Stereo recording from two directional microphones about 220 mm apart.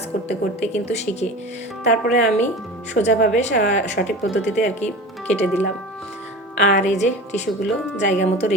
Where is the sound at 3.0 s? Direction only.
45° left (ahead or behind).